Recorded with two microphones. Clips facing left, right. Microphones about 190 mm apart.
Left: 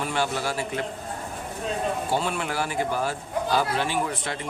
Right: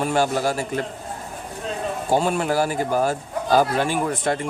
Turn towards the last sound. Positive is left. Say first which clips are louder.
# right 6 dB
turn(degrees=-45)  # may be behind; listen again after turning